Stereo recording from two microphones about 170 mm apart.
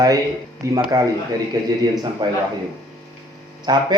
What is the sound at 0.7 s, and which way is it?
A man's voice, 20° right (ahead or behind).